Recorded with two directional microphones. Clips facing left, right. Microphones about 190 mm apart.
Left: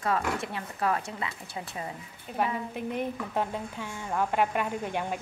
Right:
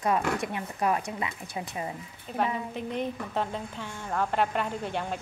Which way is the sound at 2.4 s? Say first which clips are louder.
Even; 10° left (ahead or behind).